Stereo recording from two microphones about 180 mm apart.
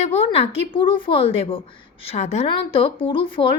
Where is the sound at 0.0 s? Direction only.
35° left (ahead or behind).